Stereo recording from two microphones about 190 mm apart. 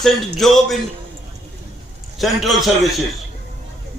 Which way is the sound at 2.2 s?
Centre (ahead or behind).